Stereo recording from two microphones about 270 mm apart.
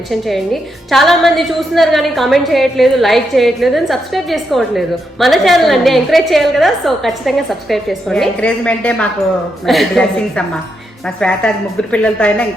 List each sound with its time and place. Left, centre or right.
0.1 s a woman's voice: centre